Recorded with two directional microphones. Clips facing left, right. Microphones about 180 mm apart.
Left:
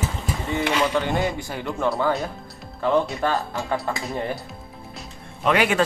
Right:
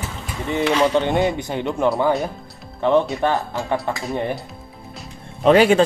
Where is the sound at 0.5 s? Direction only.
20° right (ahead or behind).